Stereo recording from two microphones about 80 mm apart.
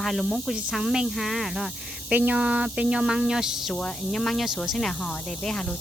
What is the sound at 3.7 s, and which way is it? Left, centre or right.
Speech, centre.